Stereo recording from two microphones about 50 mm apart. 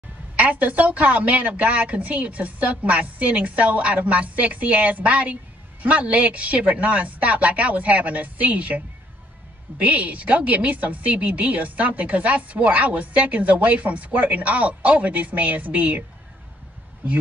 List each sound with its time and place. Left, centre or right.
0.4 s a woman's voice: right